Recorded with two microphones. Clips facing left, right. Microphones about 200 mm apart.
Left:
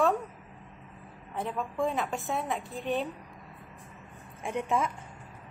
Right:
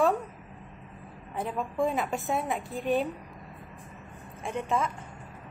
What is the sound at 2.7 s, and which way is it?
Speech, centre (ahead or behind).